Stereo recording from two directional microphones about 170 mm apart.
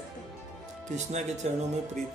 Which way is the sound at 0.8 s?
45° right (ahead or behind).